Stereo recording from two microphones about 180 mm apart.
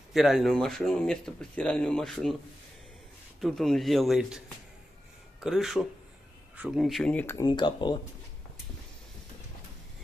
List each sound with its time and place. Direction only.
0.1 s speech: centre (ahead or behind)
3.3 s speech: centre (ahead or behind)
5.4 s speech: centre (ahead or behind)
7.4 s speech: 25° left (ahead or behind)